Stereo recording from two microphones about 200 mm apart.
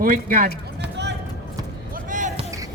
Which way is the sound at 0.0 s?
45° right (ahead or behind).